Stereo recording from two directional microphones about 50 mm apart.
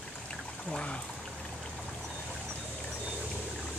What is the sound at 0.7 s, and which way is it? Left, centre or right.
Speech, centre.